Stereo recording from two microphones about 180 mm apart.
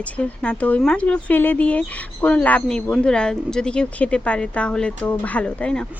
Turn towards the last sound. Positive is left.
turn(degrees=5)  # may be behind; listen again after turning